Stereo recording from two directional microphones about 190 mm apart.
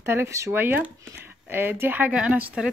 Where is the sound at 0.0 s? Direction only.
15° right (ahead or behind).